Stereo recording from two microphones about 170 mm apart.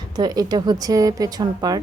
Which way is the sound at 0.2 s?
25° right (ahead or behind).